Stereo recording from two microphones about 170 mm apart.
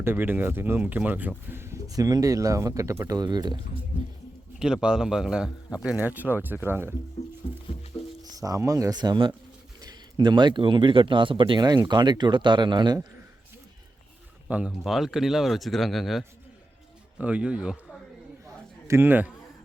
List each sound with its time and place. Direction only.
0.0 s speech: 10° right (ahead or behind)
4.6 s speech: 5° right (ahead or behind)
8.2 s speech: 20° right (ahead or behind)
14.4 s speech: 5° right (ahead or behind)
18.9 s speech: 10° right (ahead or behind)